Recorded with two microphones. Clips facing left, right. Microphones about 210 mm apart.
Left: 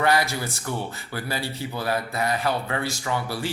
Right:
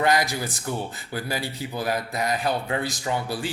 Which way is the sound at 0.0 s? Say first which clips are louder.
Even; 15° right (ahead or behind).